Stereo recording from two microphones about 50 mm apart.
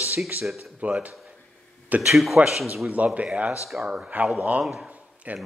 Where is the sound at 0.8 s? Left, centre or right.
Right.